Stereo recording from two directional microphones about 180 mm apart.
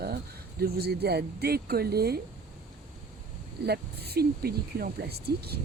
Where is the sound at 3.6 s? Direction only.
65° right (ahead or behind).